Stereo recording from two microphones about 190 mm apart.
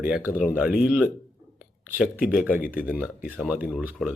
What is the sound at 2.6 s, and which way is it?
Speech, 50° left (ahead or behind).